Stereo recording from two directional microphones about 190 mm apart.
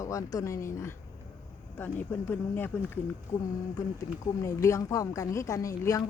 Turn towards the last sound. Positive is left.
turn(degrees=15)  # may be behind; listen again after turning